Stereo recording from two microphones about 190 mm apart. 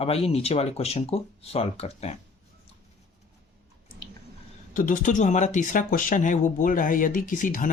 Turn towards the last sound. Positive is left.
turn(degrees=45)  # may be behind; listen again after turning